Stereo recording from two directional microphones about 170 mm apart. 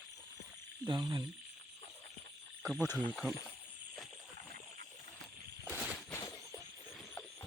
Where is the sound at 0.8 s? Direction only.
25° right (ahead or behind).